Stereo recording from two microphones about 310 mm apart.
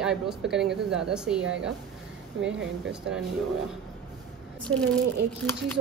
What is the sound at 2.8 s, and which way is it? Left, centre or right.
Speech, centre.